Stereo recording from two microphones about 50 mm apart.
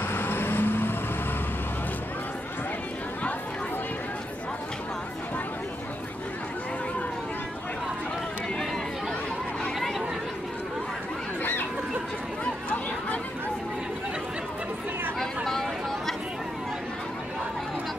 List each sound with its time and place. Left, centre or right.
0.1 s vehicle: left
9.8 s chatter: centre
12.6 s chatter: left
15.1 s a sound: centre